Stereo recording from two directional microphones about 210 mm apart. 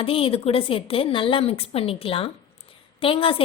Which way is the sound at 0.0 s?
25° left (ahead or behind).